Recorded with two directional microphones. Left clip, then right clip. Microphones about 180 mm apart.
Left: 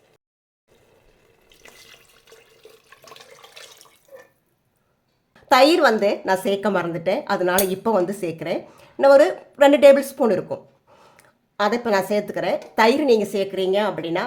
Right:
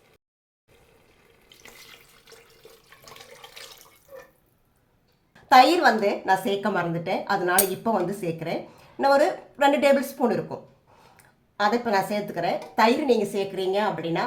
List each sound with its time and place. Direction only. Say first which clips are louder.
1.5 s water tap: left 1 dB; 15° left (ahead or behind)
5.3 s a woman's voice: left 1 dB; 65° left (ahead or behind)